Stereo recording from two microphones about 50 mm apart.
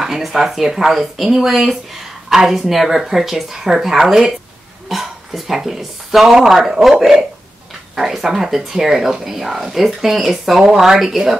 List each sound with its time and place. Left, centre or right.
0.0 s speech: centre